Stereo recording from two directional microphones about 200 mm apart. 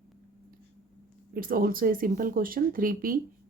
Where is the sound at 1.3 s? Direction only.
45° right (ahead or behind).